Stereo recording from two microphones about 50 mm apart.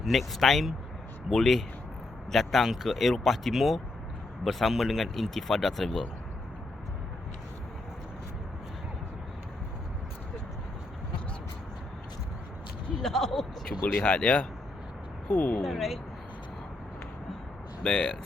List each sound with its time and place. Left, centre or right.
0.0 s speech: centre
13.0 s speech: centre
14.0 s speech: left
15.6 s speech: centre
17.8 s speech: centre